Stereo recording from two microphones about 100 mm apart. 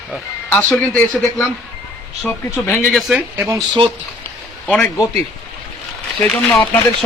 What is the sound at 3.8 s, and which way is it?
Speech, 55° right (ahead or behind).